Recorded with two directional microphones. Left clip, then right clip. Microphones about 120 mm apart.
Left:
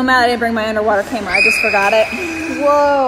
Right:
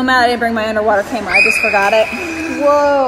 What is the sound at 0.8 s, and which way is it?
Speech, 10° left (ahead or behind).